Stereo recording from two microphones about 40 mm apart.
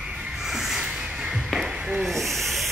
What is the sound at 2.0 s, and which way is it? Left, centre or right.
Owl, centre.